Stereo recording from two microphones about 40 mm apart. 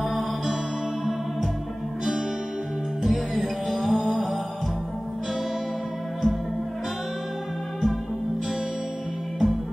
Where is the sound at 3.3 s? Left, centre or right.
Centre.